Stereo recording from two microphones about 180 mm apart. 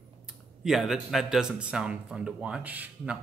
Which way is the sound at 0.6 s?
Centre (ahead or behind).